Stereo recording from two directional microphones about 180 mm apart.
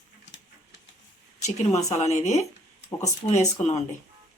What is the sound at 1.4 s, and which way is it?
A woman's voice, 40° left (ahead or behind).